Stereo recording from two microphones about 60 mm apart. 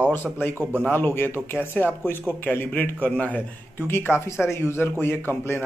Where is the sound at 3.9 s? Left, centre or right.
Left.